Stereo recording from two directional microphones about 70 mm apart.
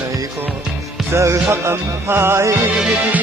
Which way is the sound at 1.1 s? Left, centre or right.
Right.